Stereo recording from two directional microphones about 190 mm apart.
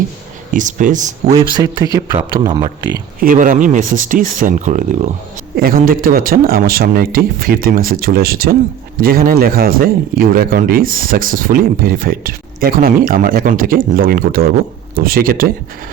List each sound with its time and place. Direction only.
0.5 s speech: 45° right (ahead or behind)
1.3 s speech: 20° right (ahead or behind)
3.2 s speech: 45° right (ahead or behind)